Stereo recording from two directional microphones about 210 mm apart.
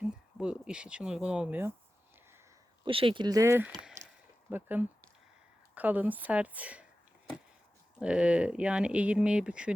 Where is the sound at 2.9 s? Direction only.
25° right (ahead or behind); by 6.9 s 5° right (ahead or behind).